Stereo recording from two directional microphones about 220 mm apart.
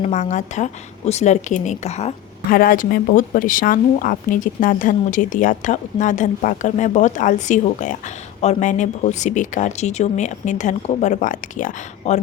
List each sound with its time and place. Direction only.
0.0 s speech: 30° left (ahead or behind)
2.5 s speech: 40° left (ahead or behind)